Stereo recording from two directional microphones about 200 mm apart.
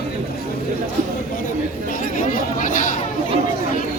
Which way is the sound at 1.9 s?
45° left (ahead or behind).